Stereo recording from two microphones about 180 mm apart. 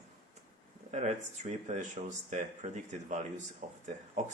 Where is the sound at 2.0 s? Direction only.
40° right (ahead or behind).